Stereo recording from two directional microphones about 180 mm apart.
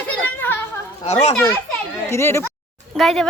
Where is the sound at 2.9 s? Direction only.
Centre (ahead or behind).